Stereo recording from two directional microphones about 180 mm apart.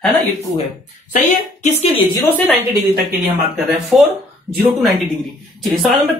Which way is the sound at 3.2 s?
10° right (ahead or behind).